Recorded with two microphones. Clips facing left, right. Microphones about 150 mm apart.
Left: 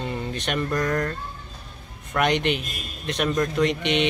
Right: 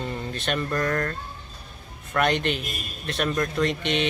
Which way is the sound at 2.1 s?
15° left (ahead or behind).